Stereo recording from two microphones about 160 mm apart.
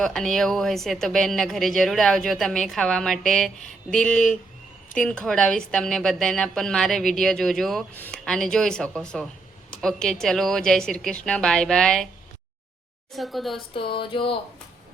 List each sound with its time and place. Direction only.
0.0 s speech: 5° left (ahead or behind)
13.1 s speech: centre (ahead or behind)
13.7 s a sound: 30° left (ahead or behind)